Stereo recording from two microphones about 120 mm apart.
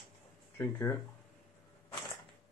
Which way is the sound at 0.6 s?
20° left (ahead or behind).